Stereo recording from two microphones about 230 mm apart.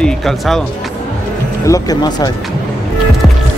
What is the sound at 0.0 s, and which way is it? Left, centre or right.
Speech, centre.